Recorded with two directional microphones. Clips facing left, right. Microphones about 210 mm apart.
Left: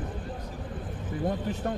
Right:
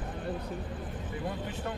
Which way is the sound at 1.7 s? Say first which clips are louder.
Left 7 dB; 40° left (ahead or behind).